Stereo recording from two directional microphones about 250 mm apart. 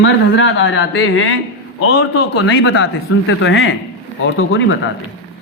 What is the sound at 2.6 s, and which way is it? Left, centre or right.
A man's voice, left.